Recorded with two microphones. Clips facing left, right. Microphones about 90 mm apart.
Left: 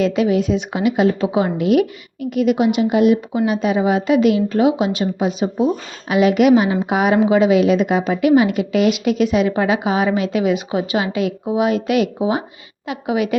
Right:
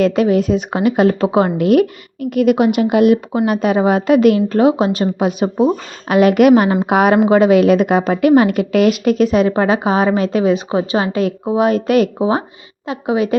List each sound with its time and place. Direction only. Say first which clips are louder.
0.0 s a woman's voice: right 3 dB; 45° right (ahead or behind)
5.2 s a woman's voice: right 3 dB; 55° right (ahead or behind); by 13.3 s 35° right (ahead or behind)